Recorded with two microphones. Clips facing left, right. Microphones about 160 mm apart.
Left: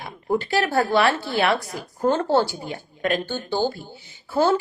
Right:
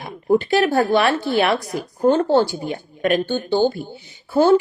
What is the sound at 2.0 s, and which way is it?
Speech, 30° right (ahead or behind).